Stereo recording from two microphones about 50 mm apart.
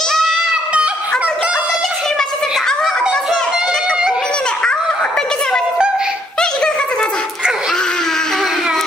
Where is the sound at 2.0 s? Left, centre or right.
Centre.